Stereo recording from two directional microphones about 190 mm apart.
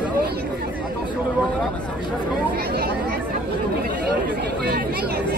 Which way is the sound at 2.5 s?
55° right (ahead or behind).